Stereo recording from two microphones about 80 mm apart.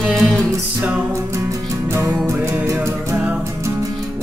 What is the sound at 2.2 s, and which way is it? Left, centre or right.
Music, right.